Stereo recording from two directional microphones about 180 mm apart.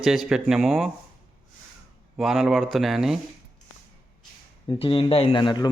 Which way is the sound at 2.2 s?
Centre (ahead or behind).